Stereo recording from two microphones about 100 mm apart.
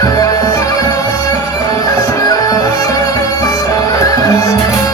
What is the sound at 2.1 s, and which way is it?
Music, 40° left (ahead or behind).